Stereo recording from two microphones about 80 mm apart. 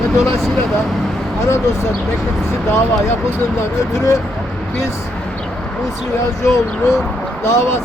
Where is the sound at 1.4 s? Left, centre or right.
Left.